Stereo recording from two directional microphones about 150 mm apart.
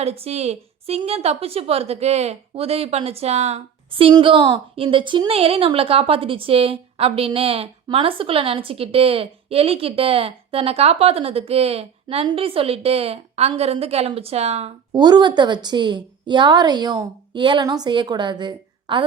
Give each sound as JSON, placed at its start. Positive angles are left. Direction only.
{"t": 0.0, "sound": "a woman's voice", "side_deg": -40}
{"t": 14.9, "sound": "a woman's voice", "side_deg": -30}